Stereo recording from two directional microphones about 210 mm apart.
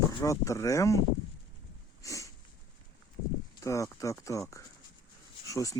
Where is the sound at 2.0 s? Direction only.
15° left (ahead or behind).